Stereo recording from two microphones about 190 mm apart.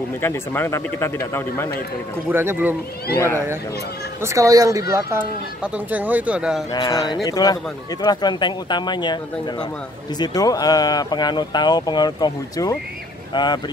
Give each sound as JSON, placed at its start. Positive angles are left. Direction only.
{"t": 0.2, "sound": "speech", "side_deg": 10}
{"t": 2.3, "sound": "speech", "side_deg": -10}
{"t": 4.2, "sound": "speech", "side_deg": -15}
{"t": 6.7, "sound": "speech", "side_deg": 20}